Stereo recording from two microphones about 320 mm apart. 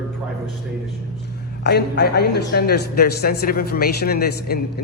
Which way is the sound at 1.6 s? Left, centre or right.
Left.